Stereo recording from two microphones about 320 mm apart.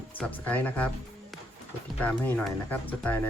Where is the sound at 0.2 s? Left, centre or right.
Centre.